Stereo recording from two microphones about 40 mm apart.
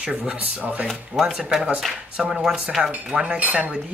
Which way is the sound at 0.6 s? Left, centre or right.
Right.